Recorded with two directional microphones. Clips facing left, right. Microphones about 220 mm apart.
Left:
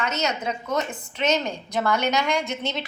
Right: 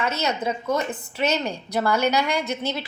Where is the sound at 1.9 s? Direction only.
10° right (ahead or behind).